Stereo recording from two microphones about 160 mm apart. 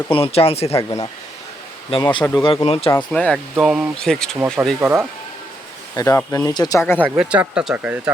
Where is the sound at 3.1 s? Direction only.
5° left (ahead or behind).